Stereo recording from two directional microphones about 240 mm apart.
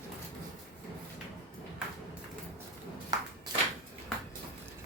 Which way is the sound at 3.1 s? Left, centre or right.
Centre.